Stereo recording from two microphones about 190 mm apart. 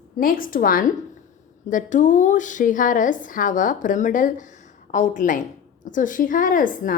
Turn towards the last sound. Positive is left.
turn(degrees=45)  # may be behind; listen again after turning